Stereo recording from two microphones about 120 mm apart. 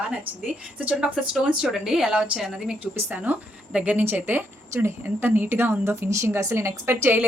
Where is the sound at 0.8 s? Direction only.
10° right (ahead or behind).